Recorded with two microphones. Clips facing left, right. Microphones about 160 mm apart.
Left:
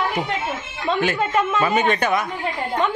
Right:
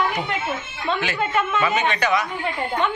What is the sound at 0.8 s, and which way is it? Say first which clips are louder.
A man's voice: left 3 dB; 45° left (ahead or behind).